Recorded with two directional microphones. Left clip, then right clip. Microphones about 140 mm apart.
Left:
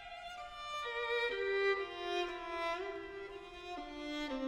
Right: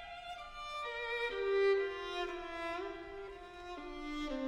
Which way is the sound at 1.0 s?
30° left (ahead or behind).